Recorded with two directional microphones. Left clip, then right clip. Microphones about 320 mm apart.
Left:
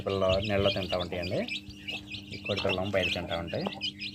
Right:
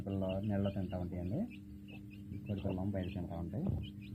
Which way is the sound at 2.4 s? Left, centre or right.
Centre.